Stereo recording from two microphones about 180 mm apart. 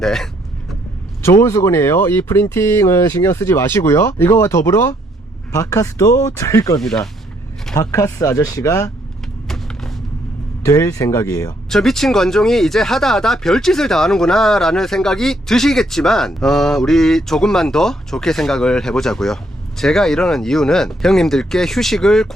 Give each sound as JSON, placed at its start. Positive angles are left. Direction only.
{"t": 0.0, "sound": "speech", "side_deg": 0}
{"t": 1.2, "sound": "speech", "side_deg": 15}
{"t": 9.5, "sound": "a sound", "side_deg": 0}
{"t": 10.6, "sound": "speech", "side_deg": 20}
{"t": 11.7, "sound": "speech", "side_deg": 0}